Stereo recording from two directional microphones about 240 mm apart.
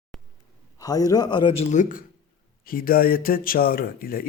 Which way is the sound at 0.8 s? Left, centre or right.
Centre.